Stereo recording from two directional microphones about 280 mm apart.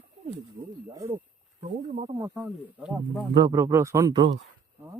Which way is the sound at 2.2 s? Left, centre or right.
Centre.